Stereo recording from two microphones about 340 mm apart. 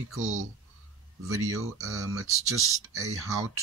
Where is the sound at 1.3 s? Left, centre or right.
Right.